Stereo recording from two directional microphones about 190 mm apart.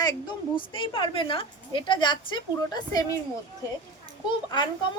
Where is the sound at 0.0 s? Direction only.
25° left (ahead or behind).